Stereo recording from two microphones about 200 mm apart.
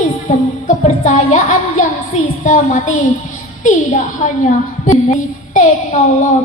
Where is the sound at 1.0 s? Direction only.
40° left (ahead or behind).